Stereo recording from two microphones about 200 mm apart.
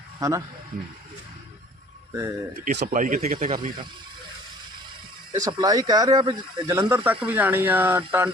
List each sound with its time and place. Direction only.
0.2 s speech: 15° right (ahead or behind)
2.7 s speech: 45° right (ahead or behind)
5.3 s speech: 15° right (ahead or behind)